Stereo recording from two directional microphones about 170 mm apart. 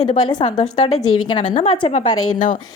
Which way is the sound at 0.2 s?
25° left (ahead or behind).